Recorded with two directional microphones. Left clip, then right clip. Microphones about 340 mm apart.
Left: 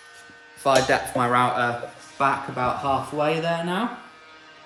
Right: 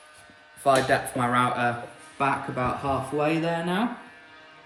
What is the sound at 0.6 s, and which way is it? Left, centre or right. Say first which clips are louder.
Speech: left 2 dB; centre.